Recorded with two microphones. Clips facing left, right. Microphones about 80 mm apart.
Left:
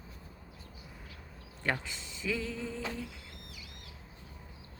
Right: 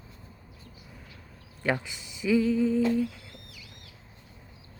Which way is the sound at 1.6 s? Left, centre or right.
Centre.